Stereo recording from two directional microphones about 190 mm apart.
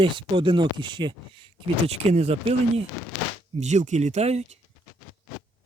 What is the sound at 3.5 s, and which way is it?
Speech, 40° right (ahead or behind).